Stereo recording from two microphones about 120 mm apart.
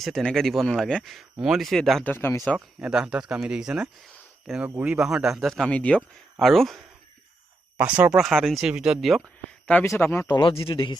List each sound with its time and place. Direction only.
0.0 s speech: 5° left (ahead or behind)
2.0 s speech: 20° left (ahead or behind)
2.8 s speech: 5° right (ahead or behind)
7.8 s speech: 10° right (ahead or behind)
8.2 s speech: centre (ahead or behind)
9.8 s speech: 20° left (ahead or behind)
10.2 s a man's voice: 35° left (ahead or behind)